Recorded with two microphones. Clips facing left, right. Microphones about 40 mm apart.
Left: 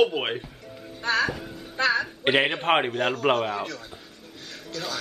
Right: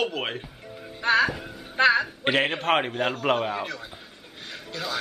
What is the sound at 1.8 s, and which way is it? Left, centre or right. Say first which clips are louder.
Speech: right 4 dB; right.